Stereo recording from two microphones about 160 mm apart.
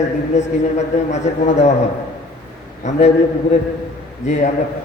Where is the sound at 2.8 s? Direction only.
45° left (ahead or behind).